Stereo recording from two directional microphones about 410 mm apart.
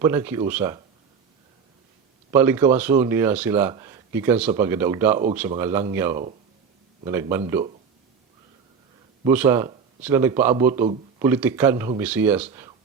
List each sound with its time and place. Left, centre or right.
0.0 s speech: centre
2.3 s speech: centre
9.2 s speech: centre